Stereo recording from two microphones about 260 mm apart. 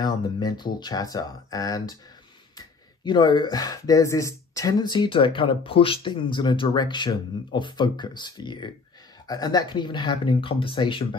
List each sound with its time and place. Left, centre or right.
0.0 s speech: centre